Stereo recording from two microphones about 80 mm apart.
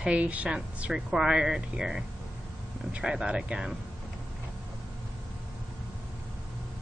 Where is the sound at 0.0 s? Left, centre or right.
Centre.